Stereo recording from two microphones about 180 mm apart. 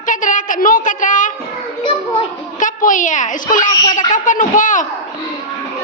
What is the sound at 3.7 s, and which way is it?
Speech, 20° left (ahead or behind).